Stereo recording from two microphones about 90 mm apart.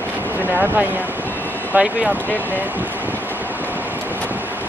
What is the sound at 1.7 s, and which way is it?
Speech, 15° right (ahead or behind).